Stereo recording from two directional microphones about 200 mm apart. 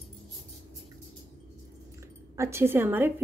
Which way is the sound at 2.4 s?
15° right (ahead or behind).